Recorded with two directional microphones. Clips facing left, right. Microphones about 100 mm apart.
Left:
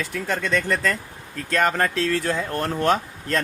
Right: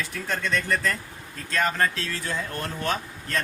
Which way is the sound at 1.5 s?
60° left (ahead or behind).